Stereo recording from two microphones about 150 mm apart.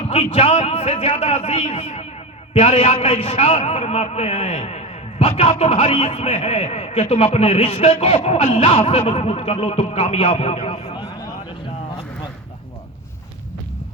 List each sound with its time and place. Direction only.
0.1 s a man's voice: 40° left (ahead or behind)